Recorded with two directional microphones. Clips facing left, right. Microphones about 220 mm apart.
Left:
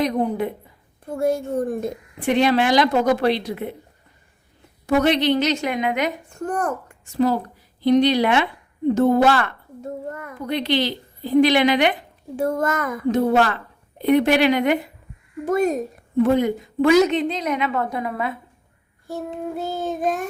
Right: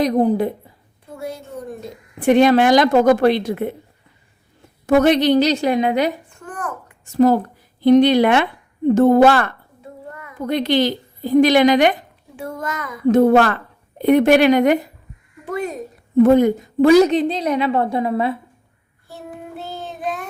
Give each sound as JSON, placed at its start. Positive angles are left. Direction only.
{"t": 0.0, "sound": "a woman's voice", "side_deg": -35}
{"t": 1.1, "sound": "child singing", "side_deg": 50}
{"t": 2.2, "sound": "a woman's voice", "side_deg": -50}
{"t": 4.9, "sound": "a woman's voice", "side_deg": -45}
{"t": 6.3, "sound": "a child's voice", "side_deg": 40}
{"t": 7.0, "sound": "a woman's voice", "side_deg": -45}
{"t": 9.8, "sound": "a sound", "side_deg": 45}
{"t": 10.4, "sound": "a woman's voice", "side_deg": -45}
{"t": 12.4, "sound": "child singing", "side_deg": 45}
{"t": 13.1, "sound": "a woman's voice", "side_deg": -55}
{"t": 15.4, "sound": "child singing", "side_deg": 45}
{"t": 16.2, "sound": "a woman's voice", "side_deg": -45}
{"t": 19.0, "sound": "child singing", "side_deg": 45}